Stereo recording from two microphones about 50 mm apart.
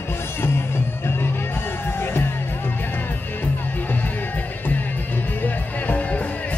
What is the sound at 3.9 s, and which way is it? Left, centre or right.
Music, left.